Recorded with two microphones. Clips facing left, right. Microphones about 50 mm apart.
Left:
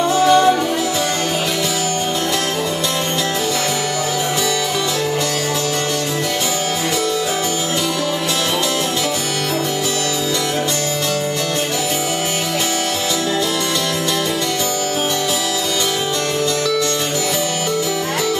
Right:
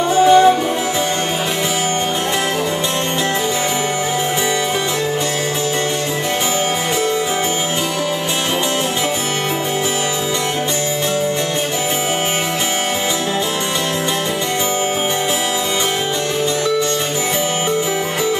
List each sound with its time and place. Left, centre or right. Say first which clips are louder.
0.1 s music: right 4 dB; right